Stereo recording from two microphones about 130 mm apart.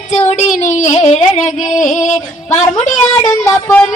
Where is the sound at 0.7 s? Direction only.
65° left (ahead or behind).